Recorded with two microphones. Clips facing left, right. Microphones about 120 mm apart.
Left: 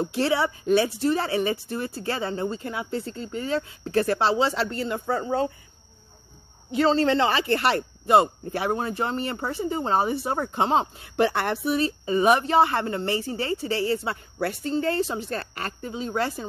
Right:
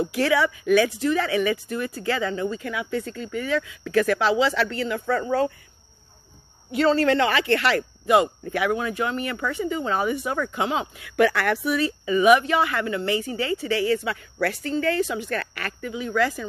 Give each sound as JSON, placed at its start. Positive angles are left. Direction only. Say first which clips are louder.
{"t": 0.0, "sound": "speech", "louder": "right 2 dB", "side_deg": 30}
{"t": 4.4, "sound": "speech", "louder": "right 2 dB", "side_deg": -90}
{"t": 6.7, "sound": "speech", "louder": "right 1 dB", "side_deg": 25}
{"t": 7.3, "sound": "a woman's voice", "louder": "right 1 dB", "side_deg": -85}
{"t": 7.7, "sound": "speech", "louder": "even", "side_deg": 35}
{"t": 14.1, "sound": "a woman's voice", "louder": "right 2 dB", "side_deg": -80}
{"t": 15.0, "sound": "speech", "louder": "right 2 dB", "side_deg": 35}